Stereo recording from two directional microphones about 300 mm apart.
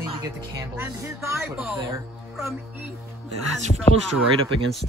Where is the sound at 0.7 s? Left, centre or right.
Centre.